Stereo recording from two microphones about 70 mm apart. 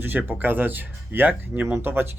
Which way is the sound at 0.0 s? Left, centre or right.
Right.